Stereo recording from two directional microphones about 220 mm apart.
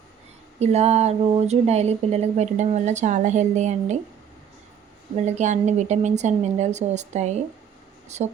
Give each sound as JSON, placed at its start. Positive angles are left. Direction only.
{"t": 0.6, "sound": "speech", "side_deg": -30}
{"t": 5.1, "sound": "speech", "side_deg": -30}